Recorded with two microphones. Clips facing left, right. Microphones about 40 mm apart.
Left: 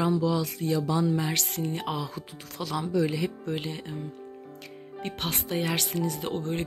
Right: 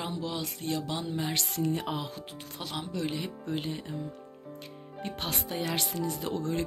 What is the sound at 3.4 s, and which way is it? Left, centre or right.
Speech, left.